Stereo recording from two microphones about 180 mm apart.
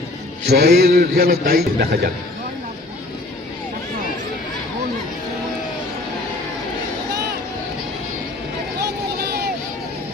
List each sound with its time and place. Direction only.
0.4 s a man's voice: 65° right (ahead or behind)